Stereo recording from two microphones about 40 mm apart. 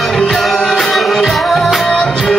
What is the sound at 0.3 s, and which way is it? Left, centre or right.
Music, centre.